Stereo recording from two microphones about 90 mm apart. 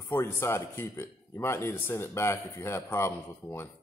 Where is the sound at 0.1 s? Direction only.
25° left (ahead or behind).